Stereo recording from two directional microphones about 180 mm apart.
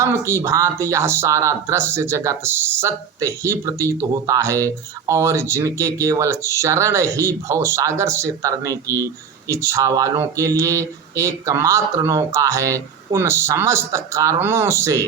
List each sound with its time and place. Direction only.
0.0 s speech: 15° right (ahead or behind)